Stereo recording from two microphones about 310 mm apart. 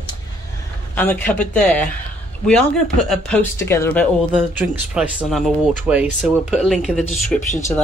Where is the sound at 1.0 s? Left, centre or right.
Centre.